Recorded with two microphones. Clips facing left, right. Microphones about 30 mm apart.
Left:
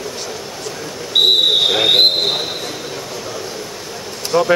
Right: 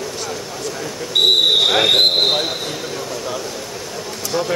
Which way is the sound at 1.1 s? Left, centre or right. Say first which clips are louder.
Left 1 dB; centre.